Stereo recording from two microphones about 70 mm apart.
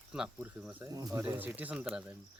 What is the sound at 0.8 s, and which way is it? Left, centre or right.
Speech, right.